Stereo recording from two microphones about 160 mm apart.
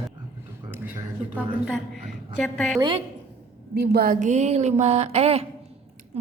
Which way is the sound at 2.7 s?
30° right (ahead or behind).